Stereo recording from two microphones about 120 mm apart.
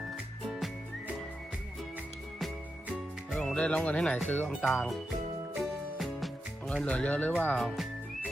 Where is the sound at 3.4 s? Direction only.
10° left (ahead or behind).